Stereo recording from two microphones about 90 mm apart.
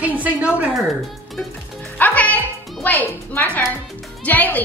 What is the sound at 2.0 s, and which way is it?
Music, 20° left (ahead or behind).